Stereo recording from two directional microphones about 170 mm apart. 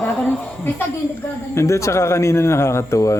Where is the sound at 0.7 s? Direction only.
15° left (ahead or behind).